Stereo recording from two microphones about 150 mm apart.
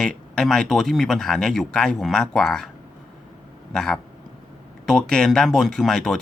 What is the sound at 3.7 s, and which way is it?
Speech, 5° left (ahead or behind).